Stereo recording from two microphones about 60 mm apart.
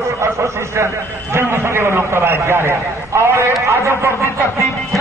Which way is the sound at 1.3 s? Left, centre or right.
Right.